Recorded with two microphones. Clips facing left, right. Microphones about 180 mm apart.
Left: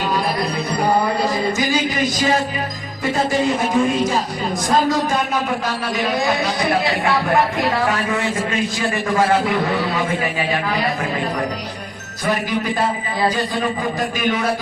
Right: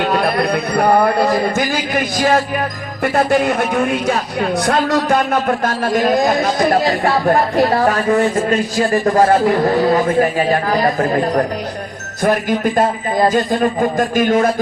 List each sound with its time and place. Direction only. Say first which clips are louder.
0.0 s a woman's voice: right 5 dB; 65° right (ahead or behind); by 14.4 s 45° right (ahead or behind)